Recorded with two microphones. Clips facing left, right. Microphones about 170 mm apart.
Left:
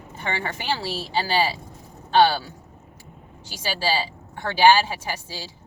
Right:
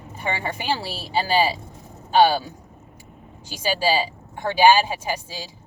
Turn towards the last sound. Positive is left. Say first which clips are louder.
# right 3 dB
turn(degrees=-15)  # may be behind; listen again after turning